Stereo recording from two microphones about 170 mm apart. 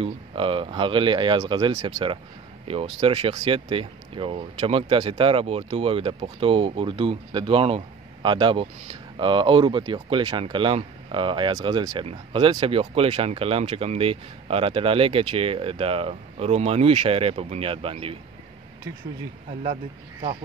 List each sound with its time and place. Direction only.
0.0 s speech: 30° right (ahead or behind)
19.6 s speech: 35° right (ahead or behind)